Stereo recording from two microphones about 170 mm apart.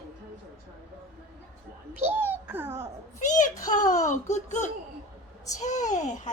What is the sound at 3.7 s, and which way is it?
Speech, 45° left (ahead or behind).